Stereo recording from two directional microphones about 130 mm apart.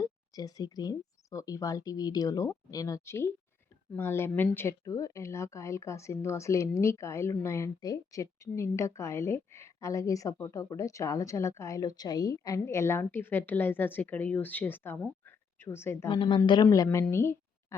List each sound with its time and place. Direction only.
0.0 s a woman's voice: 30° left (ahead or behind)
15.3 s a sound: 15° left (ahead or behind)
16.0 s a woman's voice: 30° left (ahead or behind)